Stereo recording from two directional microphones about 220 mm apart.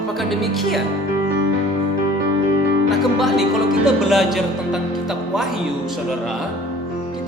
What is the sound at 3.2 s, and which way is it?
Music, centre (ahead or behind).